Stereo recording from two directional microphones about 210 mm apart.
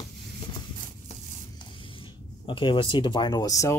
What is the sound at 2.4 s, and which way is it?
Speech, 25° left (ahead or behind).